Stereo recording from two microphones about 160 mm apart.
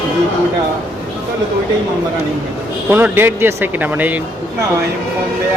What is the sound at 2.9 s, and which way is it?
Speech, 15° right (ahead or behind).